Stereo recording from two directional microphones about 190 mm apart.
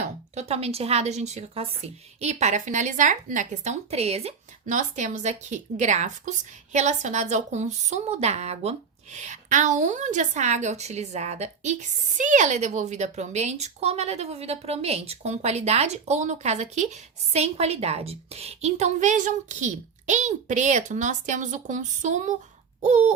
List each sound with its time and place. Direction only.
0.3 s a woman's voice: 35° right (ahead or behind)